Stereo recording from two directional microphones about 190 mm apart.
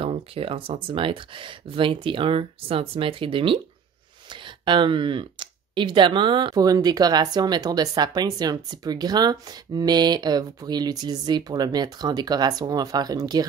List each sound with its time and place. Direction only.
0.0 s speech: 30° right (ahead or behind)